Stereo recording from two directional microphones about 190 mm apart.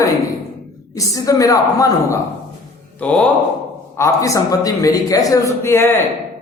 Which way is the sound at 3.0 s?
5° left (ahead or behind).